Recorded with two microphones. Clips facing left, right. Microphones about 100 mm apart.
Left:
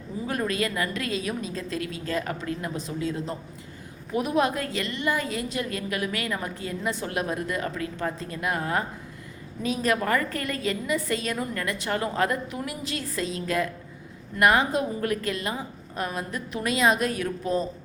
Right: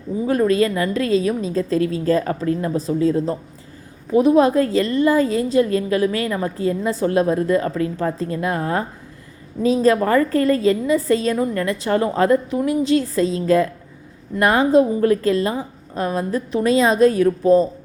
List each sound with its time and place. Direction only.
0.3 s a woman's voice: 30° right (ahead or behind)